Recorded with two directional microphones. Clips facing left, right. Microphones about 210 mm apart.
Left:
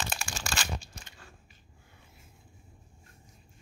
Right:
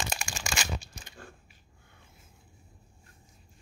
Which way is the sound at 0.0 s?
10° right (ahead or behind).